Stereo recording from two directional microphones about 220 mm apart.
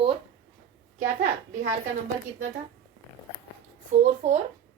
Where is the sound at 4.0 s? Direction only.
30° right (ahead or behind).